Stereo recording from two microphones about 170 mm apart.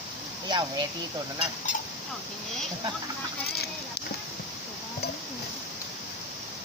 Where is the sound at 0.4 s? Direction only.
25° right (ahead or behind).